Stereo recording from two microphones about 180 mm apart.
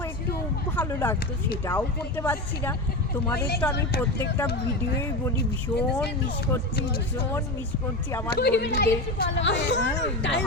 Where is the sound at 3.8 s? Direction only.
65° left (ahead or behind).